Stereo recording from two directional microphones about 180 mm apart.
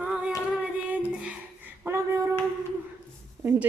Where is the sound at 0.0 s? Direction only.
5° right (ahead or behind).